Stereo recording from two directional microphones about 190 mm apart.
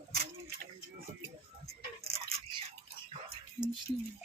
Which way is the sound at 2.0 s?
30° right (ahead or behind).